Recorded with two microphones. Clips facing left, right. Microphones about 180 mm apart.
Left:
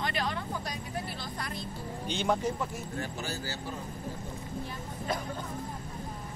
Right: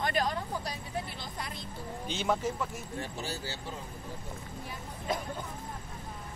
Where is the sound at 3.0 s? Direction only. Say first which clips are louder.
Even; 30° right (ahead or behind).